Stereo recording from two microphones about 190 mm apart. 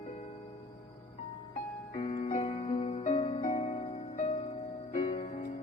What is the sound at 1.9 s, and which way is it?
Music, 30° left (ahead or behind).